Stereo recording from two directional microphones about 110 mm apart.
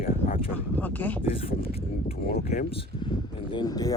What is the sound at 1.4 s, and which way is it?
Speech, 60° left (ahead or behind).